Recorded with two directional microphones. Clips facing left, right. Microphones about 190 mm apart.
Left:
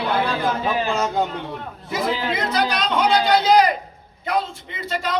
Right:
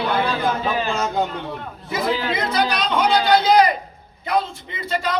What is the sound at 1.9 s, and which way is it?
A man's voice, centre (ahead or behind).